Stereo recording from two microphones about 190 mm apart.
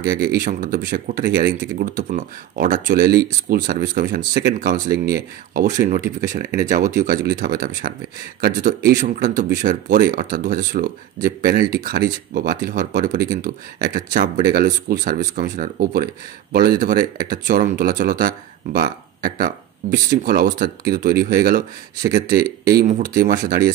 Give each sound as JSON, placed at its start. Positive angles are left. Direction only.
{"t": 0.1, "sound": "speech", "side_deg": -50}